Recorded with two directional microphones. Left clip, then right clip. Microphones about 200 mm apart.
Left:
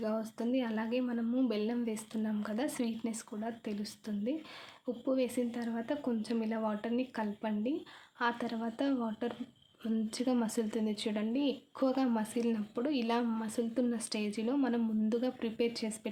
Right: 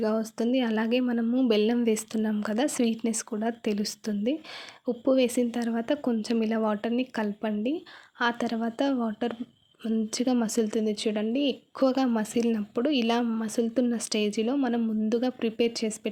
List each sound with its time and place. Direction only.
0.0 s speech: 35° right (ahead or behind)